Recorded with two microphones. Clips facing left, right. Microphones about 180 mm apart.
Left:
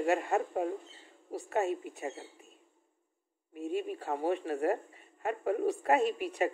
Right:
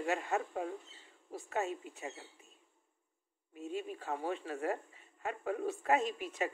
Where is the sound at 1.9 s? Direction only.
40° left (ahead or behind).